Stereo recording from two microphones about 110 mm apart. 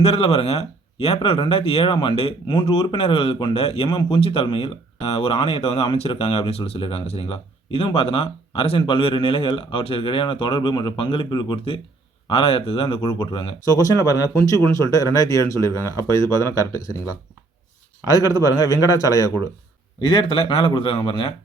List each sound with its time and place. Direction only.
0.0 s speech: 60° left (ahead or behind)
3.8 s speech: 50° left (ahead or behind)
13.7 s a man's voice: 35° left (ahead or behind)
20.0 s speech: 50° left (ahead or behind)